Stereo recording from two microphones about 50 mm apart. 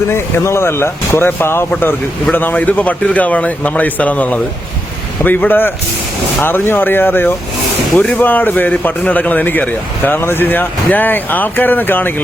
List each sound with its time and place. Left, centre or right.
0.1 s speech: left
2.3 s speech: left
7.9 s speech: left
8.2 s speech: left
10.1 s speech: left